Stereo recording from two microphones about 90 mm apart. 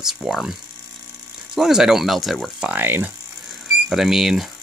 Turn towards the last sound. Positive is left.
turn(degrees=-5)  # may be behind; listen again after turning